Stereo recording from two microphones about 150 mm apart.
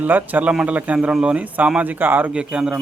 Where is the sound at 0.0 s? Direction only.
10° right (ahead or behind).